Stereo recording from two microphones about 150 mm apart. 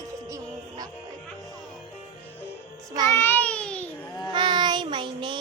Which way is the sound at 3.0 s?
15° left (ahead or behind).